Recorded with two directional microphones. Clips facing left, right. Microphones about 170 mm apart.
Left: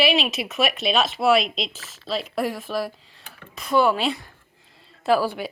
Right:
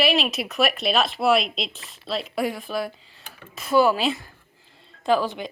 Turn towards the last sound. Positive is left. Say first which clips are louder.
# left 1 dB
turn(degrees=5)  # may be behind; listen again after turning